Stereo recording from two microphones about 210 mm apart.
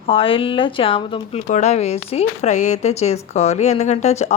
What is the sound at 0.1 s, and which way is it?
Speech, 25° left (ahead or behind).